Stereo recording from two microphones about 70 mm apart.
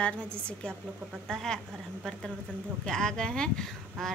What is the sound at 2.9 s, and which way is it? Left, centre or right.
A woman's voice, centre.